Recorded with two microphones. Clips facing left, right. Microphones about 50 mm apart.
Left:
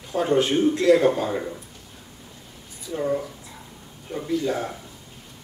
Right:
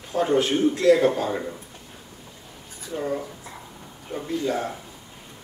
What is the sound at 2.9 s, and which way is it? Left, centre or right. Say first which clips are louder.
Speech: left 3 dB; centre.